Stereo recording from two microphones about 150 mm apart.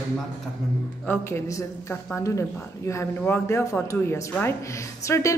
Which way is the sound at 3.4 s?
20° left (ahead or behind).